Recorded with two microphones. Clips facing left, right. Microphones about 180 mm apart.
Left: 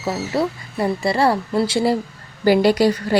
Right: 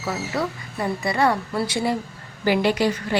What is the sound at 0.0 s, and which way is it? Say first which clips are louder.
A woman's voice: left 5 dB; 25° left (ahead or behind).